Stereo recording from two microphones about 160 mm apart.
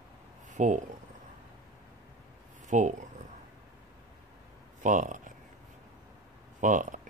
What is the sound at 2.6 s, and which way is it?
Speech, 50° right (ahead or behind).